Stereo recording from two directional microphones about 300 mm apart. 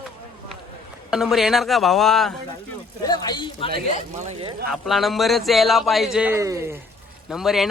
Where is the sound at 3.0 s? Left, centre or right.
Centre.